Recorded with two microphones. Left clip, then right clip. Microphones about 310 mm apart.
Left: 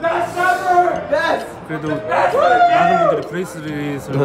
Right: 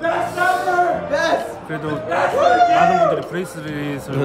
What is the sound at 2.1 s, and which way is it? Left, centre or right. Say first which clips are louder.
Speech: left 2 dB; centre.